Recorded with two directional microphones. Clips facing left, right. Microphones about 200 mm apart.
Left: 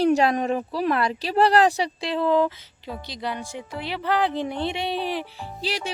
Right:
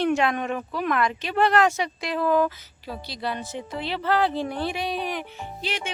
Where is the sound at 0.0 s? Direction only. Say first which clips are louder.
Left 3 dB; 35° left (ahead or behind).